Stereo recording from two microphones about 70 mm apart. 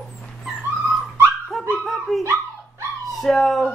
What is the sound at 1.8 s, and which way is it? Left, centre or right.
Dog, centre.